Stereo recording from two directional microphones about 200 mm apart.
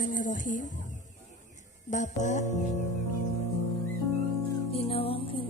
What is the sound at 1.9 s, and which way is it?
Speech, 40° left (ahead or behind).